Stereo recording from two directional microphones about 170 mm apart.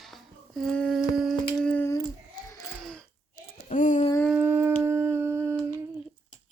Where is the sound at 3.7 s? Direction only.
50° left (ahead or behind).